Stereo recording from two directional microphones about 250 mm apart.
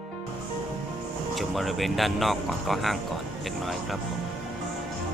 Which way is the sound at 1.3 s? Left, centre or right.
Centre.